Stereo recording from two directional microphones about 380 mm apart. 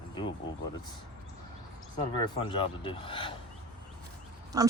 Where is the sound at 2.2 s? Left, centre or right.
Centre.